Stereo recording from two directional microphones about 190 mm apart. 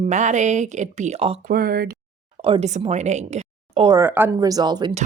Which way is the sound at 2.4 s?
30° right (ahead or behind).